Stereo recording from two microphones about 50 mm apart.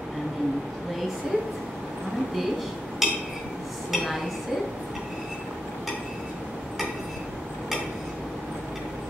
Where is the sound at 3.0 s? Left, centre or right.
Centre.